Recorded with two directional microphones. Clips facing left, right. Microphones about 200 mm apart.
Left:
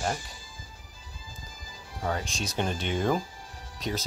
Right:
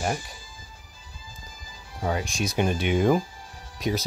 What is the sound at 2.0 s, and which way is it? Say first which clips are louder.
Speech: right 4 dB; 10° right (ahead or behind).